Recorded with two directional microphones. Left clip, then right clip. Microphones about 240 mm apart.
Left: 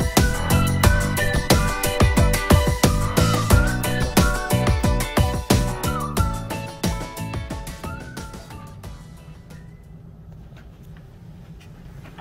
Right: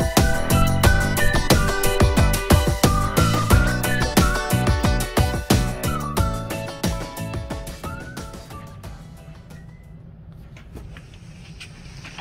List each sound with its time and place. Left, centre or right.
0.0 s music: centre